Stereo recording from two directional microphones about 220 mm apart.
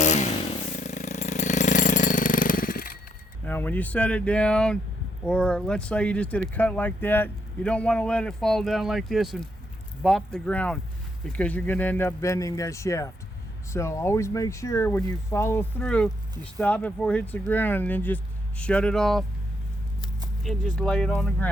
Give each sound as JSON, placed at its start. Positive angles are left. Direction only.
{"t": 0.0, "sound": "chainsaw", "side_deg": 30}
{"t": 3.4, "sound": "speech", "side_deg": 10}
{"t": 20.4, "sound": "speech", "side_deg": 0}